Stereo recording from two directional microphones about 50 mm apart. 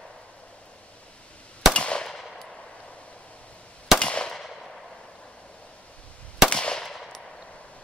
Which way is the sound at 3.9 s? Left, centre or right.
Centre.